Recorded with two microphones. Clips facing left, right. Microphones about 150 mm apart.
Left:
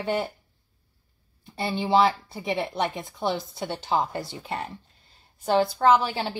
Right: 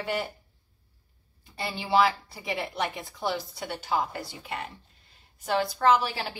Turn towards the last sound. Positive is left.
turn(degrees=25)  # may be behind; listen again after turning